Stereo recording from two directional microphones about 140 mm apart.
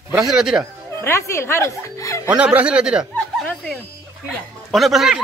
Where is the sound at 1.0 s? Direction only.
20° left (ahead or behind).